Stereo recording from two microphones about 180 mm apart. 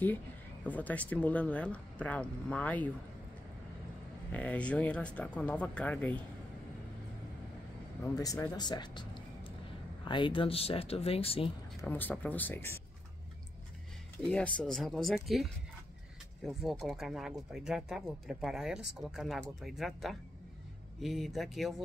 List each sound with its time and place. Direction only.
0.7 s speech: 10° left (ahead or behind)
4.3 s speech: 10° left (ahead or behind)
8.0 s speech: 15° left (ahead or behind)
11.8 s speech: 10° left (ahead or behind)
14.2 s speech: 5° left (ahead or behind)